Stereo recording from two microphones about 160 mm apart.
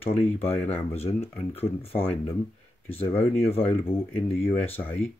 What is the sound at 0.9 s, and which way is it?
Speech, 40° left (ahead or behind).